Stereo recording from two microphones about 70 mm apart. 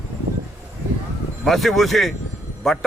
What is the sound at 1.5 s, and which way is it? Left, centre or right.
Speech, centre.